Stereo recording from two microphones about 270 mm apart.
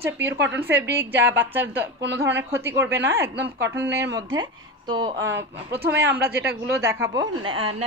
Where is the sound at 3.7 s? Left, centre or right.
Centre.